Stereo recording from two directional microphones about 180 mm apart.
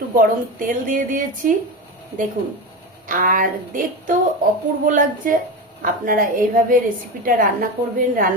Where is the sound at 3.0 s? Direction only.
50° right (ahead or behind).